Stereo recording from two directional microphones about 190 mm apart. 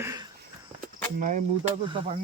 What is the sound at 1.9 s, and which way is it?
Speech, 25° right (ahead or behind).